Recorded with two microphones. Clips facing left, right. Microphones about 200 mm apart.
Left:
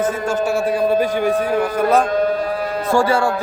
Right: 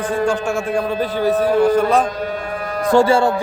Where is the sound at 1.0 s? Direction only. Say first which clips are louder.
Right 1 dB; 15° left (ahead or behind).